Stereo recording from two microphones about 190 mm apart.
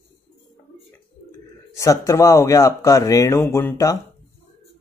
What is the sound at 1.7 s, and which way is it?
Speech, 15° left (ahead or behind).